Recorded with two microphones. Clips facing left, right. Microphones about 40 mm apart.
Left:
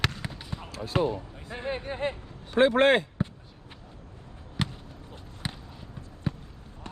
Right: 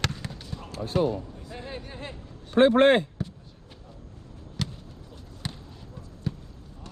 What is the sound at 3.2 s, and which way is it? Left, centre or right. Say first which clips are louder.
Basketball bounce: left 3 dB; left.